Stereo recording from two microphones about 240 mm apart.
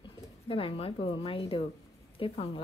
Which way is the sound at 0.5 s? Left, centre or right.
Left.